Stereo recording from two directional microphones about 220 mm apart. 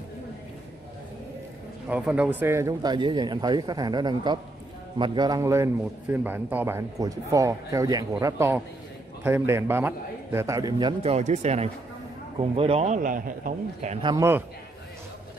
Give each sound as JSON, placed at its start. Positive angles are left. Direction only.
{"t": 1.9, "sound": "a man's voice", "side_deg": -5}
{"t": 14.0, "sound": "a man's voice", "side_deg": -15}